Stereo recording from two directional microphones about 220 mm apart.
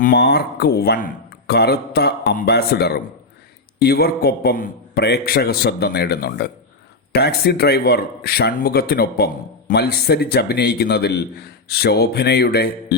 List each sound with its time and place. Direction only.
0.0 s a man's voice: 45° left (ahead or behind)